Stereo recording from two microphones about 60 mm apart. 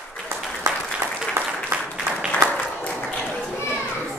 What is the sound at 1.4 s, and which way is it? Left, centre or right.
Applause, right.